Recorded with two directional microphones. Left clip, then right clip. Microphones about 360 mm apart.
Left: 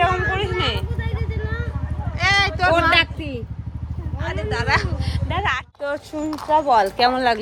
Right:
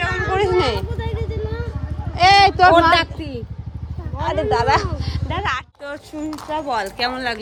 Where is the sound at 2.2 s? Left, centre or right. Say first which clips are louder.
Right 7 dB; centre.